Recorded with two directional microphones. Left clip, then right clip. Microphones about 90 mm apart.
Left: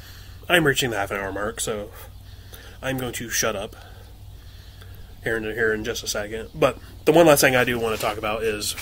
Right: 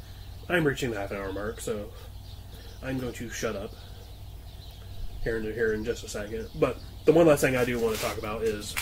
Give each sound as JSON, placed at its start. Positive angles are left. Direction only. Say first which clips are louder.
{"t": 0.5, "sound": "speech", "louder": "left 7 dB", "side_deg": 30}
{"t": 2.8, "sound": "speech", "louder": "left 6 dB", "side_deg": 30}
{"t": 5.2, "sound": "speech", "louder": "left 5 dB", "side_deg": 30}